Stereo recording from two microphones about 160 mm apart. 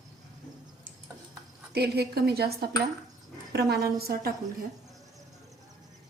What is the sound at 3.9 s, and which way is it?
Speech, 70° right (ahead or behind).